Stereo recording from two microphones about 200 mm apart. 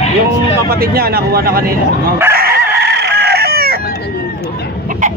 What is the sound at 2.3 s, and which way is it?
Chicken, 50° right (ahead or behind).